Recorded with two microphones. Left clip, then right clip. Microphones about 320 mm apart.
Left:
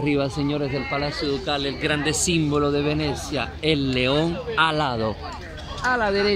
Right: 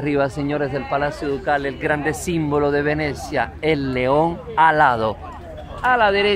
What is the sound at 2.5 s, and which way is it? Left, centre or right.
Speech, right.